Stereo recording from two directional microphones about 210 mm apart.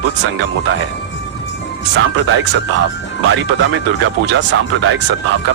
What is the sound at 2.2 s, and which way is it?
Speech, 65° right (ahead or behind).